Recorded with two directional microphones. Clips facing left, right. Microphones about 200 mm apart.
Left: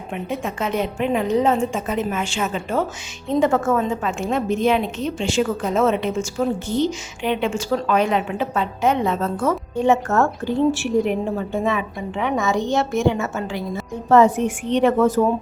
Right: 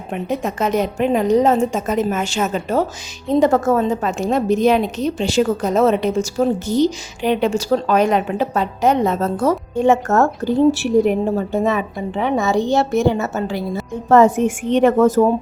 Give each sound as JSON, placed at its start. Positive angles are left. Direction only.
{"t": 0.1, "sound": "a woman's voice", "side_deg": -40}